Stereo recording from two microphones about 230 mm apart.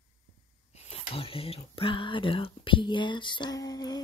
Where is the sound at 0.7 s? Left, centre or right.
Left.